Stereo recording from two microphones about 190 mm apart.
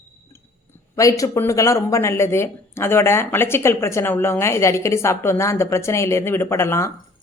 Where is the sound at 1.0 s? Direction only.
15° left (ahead or behind).